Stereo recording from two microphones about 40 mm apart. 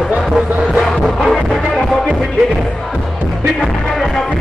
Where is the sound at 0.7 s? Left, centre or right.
Centre.